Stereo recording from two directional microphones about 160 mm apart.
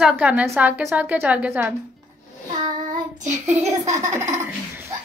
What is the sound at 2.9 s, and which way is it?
Child singing, 50° right (ahead or behind).